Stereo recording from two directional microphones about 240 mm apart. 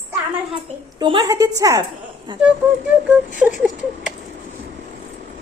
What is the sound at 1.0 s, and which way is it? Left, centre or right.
A child's voice, centre.